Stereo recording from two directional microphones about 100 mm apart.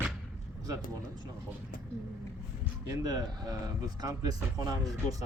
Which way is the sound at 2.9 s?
40° right (ahead or behind).